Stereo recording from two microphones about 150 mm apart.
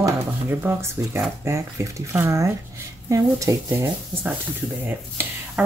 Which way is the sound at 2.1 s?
20° right (ahead or behind).